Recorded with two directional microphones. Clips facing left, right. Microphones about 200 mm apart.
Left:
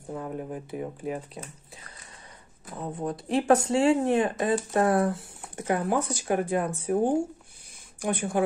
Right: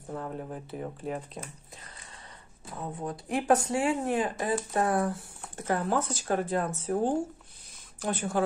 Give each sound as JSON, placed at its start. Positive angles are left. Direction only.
{"t": 0.1, "sound": "speech", "side_deg": 10}
{"t": 2.8, "sound": "speech", "side_deg": 20}